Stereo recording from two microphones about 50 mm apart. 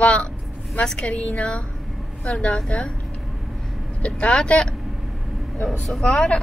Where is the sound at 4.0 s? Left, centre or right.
Left.